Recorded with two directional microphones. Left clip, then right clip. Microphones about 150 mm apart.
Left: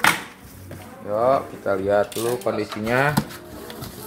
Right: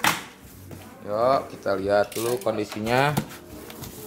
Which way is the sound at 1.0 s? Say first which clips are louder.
Left 2 dB; 5° right (ahead or behind).